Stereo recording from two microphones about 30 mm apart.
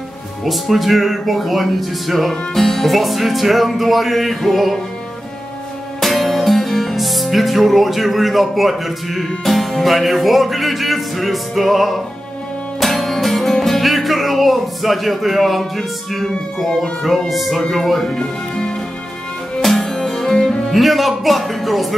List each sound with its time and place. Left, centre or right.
0.5 s music: centre
5.9 s music: centre
13.7 s speech: centre
17.3 s music: centre
18.0 s speech: left
19.6 s music: centre